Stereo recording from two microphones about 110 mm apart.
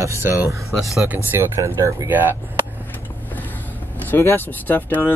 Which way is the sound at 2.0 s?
20° right (ahead or behind).